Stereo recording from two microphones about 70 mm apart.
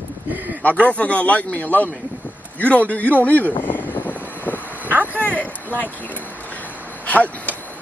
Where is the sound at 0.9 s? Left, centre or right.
Centre.